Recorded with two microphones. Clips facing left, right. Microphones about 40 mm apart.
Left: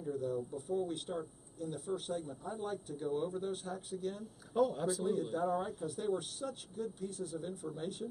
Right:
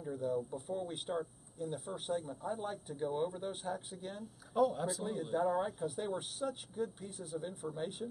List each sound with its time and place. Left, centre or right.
0.0 s speech: centre
4.2 s speech: centre